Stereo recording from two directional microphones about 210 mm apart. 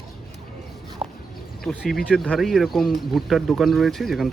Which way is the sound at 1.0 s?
5° right (ahead or behind).